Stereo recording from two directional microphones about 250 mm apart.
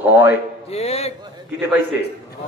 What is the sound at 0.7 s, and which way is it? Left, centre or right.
Speech, left.